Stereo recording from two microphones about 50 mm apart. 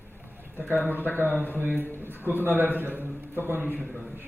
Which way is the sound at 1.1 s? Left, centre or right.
Right.